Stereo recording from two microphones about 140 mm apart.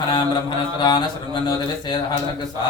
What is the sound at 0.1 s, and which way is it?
Speech, 30° left (ahead or behind).